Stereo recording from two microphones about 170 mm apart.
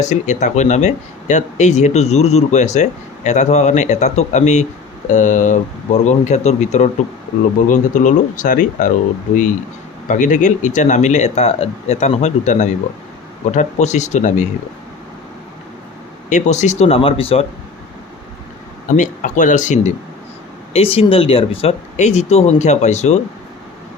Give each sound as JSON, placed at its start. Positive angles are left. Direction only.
{"t": 0.0, "sound": "speech", "side_deg": 45}
{"t": 10.1, "sound": "speech", "side_deg": 45}
{"t": 16.3, "sound": "speech", "side_deg": 45}
{"t": 18.9, "sound": "speech", "side_deg": 50}
{"t": 20.7, "sound": "speech", "side_deg": 35}